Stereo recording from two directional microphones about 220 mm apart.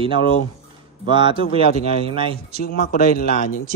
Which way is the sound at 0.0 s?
25° right (ahead or behind).